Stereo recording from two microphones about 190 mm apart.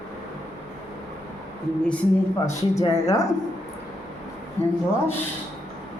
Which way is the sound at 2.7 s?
20° left (ahead or behind).